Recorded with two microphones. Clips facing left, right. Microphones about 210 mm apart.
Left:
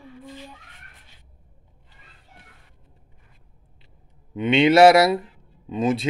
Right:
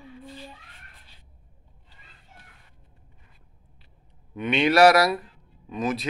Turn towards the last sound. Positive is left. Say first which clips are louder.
# left 5 dB
turn(degrees=25)  # may be behind; listen again after turning